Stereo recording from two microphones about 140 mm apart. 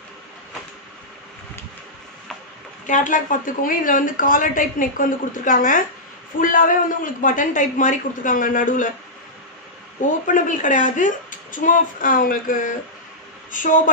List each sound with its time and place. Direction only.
2.9 s a woman's voice: 70° left (ahead or behind)
10.2 s a woman's voice: 70° left (ahead or behind)